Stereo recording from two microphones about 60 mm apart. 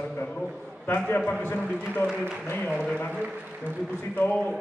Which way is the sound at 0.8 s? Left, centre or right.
Left.